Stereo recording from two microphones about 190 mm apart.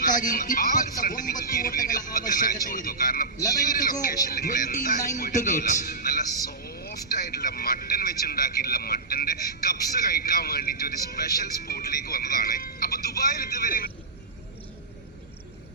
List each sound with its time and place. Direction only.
0.0 s a man's voice: 45° left (ahead or behind)
3.3 s speech: 20° left (ahead or behind)
3.8 s a man's voice: 50° left (ahead or behind)
6.5 s vehicle: 55° left (ahead or behind)